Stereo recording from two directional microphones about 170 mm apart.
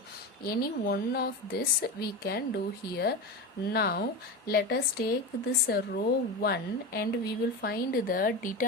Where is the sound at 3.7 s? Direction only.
65° left (ahead or behind).